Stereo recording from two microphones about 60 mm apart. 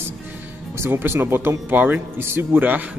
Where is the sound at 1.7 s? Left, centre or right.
Right.